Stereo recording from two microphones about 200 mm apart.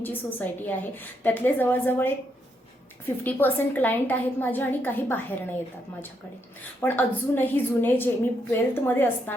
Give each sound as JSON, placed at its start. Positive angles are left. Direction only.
{"t": 0.0, "sound": "a woman's voice", "side_deg": 10}
{"t": 3.2, "sound": "a woman's voice", "side_deg": 10}
{"t": 6.8, "sound": "a woman's voice", "side_deg": 10}